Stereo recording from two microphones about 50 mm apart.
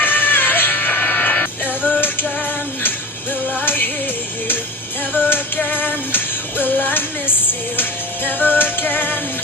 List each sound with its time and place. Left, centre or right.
0.0 s music: left
3.6 s music: left
5.1 s music: left